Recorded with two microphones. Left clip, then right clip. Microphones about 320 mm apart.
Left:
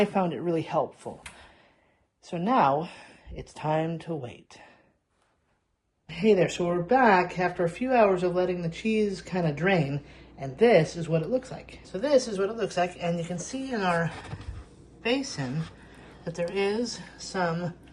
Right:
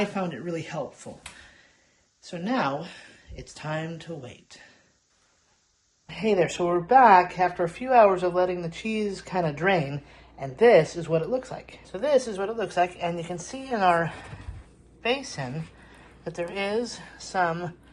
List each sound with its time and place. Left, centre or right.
0.0 s speech: centre
2.2 s speech: centre
6.1 s speech: centre